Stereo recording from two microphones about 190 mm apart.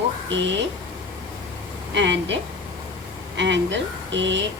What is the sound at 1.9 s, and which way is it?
Speech, 70° right (ahead or behind).